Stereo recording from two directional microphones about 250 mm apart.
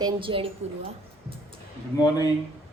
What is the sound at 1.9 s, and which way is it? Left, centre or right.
Speech, centre.